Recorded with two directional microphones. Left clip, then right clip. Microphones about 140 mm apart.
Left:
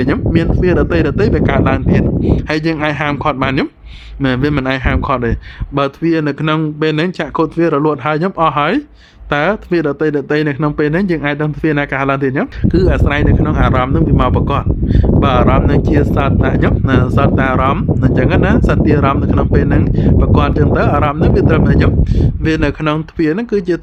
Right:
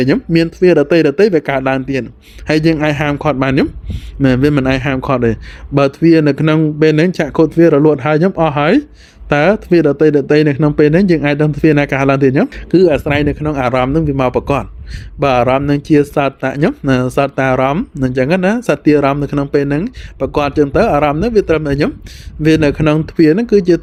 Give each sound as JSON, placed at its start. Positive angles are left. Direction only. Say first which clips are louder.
{"t": 0.0, "sound": "speech", "louder": "right 2 dB", "side_deg": -25}
{"t": 12.6, "sound": "speech", "louder": "right 4 dB", "side_deg": -20}